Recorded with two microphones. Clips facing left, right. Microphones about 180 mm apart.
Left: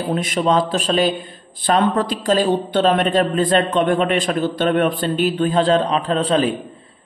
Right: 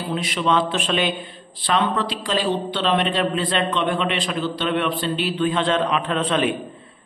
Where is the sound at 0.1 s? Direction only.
45° left (ahead or behind).